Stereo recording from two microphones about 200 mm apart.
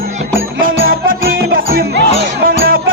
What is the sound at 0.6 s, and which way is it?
Music, 45° right (ahead or behind).